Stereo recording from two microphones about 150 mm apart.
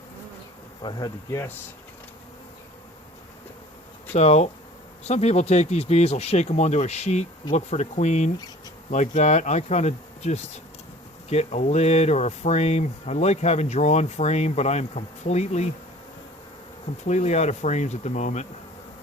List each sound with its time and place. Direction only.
0.8 s speech: 30° left (ahead or behind)
4.1 s speech: 45° left (ahead or behind)
17.1 s speech: 50° left (ahead or behind)